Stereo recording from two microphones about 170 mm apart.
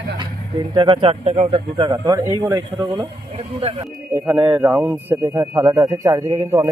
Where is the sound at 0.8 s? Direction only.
30° right (ahead or behind).